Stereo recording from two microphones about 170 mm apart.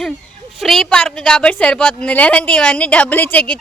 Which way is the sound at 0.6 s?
Centre (ahead or behind).